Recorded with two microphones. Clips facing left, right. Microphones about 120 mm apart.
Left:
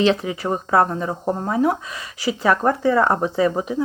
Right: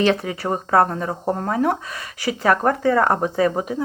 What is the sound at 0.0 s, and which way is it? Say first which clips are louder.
Speech: left 1 dB; 50° right (ahead or behind).